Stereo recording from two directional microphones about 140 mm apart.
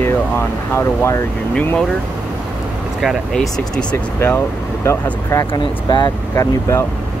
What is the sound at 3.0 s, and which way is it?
Speech, centre (ahead or behind).